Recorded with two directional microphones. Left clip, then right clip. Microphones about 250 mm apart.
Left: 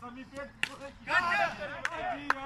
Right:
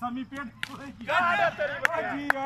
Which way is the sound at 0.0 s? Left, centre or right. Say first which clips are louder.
Right 8 dB; right.